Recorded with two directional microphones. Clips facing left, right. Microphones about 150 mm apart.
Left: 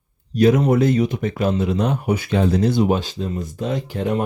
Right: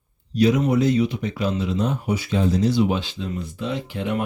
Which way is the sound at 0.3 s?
50° left (ahead or behind).